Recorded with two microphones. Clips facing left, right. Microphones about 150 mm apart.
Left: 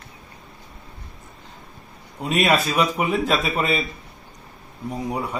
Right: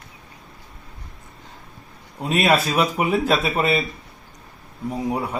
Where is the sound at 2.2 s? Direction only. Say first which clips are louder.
Right 1 dB; centre (ahead or behind).